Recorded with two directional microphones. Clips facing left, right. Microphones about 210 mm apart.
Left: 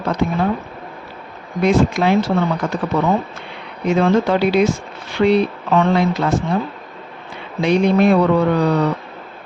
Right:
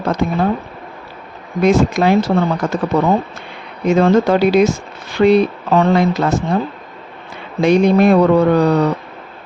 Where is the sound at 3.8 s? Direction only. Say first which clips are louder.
Right 3 dB; 45° right (ahead or behind).